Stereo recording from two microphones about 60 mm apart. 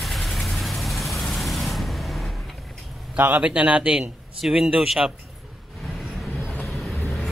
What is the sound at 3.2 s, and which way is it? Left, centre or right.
Speech, right.